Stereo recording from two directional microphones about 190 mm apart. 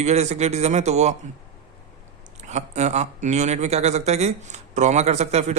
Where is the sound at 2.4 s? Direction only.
35° right (ahead or behind).